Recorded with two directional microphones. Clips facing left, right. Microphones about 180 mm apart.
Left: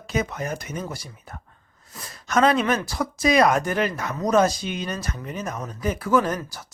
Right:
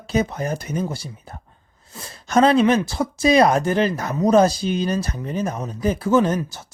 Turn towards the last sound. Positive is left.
turn(degrees=-25)  # may be behind; listen again after turning